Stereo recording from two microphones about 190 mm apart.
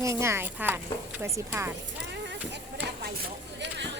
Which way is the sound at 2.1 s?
65° right (ahead or behind).